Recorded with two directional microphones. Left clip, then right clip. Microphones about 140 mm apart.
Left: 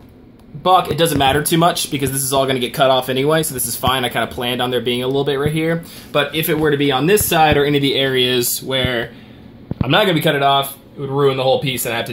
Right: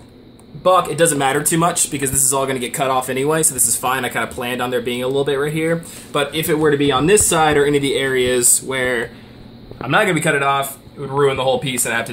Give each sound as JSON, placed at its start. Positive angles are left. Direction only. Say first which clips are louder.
{"t": 0.7, "sound": "speech", "louder": "even", "side_deg": 40}
{"t": 6.3, "sound": "speech", "louder": "even", "side_deg": 25}
{"t": 6.6, "sound": "speech", "louder": "right 1 dB", "side_deg": 0}
{"t": 7.3, "sound": "speech", "louder": "left 1 dB", "side_deg": 30}
{"t": 9.8, "sound": "a man's voice", "louder": "left 1 dB", "side_deg": 65}